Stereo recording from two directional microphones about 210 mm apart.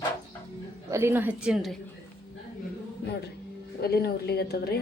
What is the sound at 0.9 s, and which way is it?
Speech, 15° right (ahead or behind).